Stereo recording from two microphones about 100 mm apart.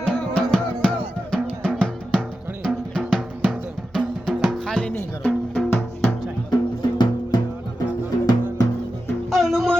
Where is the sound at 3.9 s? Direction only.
5° left (ahead or behind).